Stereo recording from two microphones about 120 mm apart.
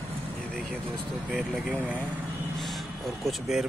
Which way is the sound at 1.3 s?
10° right (ahead or behind).